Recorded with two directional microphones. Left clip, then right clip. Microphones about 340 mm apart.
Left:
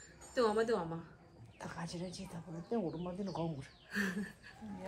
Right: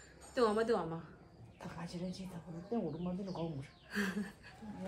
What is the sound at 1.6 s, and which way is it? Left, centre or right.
Speech, left.